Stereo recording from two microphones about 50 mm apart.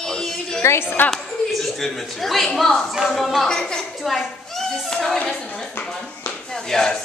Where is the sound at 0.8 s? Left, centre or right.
Left.